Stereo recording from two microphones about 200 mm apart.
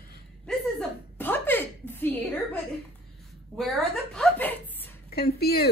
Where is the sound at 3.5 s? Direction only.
Centre (ahead or behind).